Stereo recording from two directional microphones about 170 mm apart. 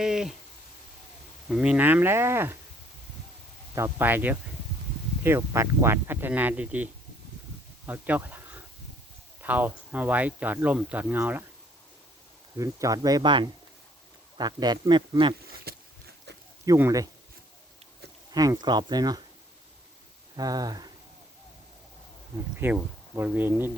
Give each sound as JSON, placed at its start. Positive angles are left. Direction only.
{"t": 0.0, "sound": "speech", "side_deg": -5}
{"t": 1.5, "sound": "speech", "side_deg": -5}
{"t": 3.8, "sound": "speech", "side_deg": -15}
{"t": 9.4, "sound": "speech", "side_deg": -10}
{"t": 12.5, "sound": "a man's voice", "side_deg": -20}
{"t": 15.7, "sound": "a sound", "side_deg": -65}
{"t": 16.6, "sound": "a man's voice", "side_deg": -15}
{"t": 18.3, "sound": "a man's voice", "side_deg": -20}
{"t": 20.3, "sound": "speech", "side_deg": -20}
{"t": 22.5, "sound": "speech", "side_deg": -10}